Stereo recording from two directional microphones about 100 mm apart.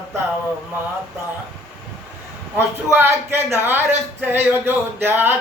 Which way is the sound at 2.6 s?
25° right (ahead or behind).